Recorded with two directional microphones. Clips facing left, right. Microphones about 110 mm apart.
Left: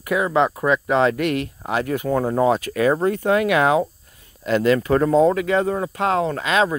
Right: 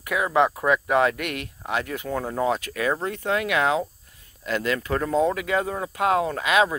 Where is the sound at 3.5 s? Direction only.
55° left (ahead or behind).